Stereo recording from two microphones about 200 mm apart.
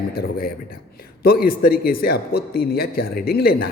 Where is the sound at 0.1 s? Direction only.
50° left (ahead or behind).